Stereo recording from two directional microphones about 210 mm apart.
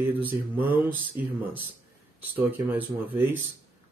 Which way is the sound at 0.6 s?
10° right (ahead or behind).